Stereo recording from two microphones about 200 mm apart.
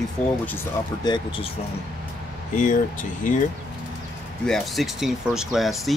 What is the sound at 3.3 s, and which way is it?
Speech, 40° left (ahead or behind).